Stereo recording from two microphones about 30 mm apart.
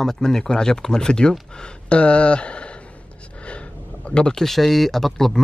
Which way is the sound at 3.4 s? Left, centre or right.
Left.